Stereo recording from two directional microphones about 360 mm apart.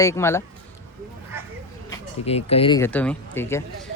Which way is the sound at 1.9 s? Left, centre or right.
Centre.